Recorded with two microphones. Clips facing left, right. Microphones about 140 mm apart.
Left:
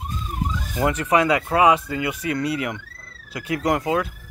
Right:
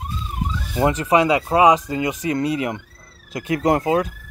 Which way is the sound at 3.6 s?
25° right (ahead or behind).